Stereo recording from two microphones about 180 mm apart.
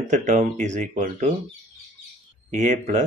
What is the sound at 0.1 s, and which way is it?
Speech, 40° right (ahead or behind).